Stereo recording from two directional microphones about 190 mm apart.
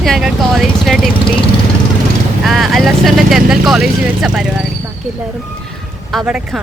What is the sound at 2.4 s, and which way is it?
Speech, centre (ahead or behind).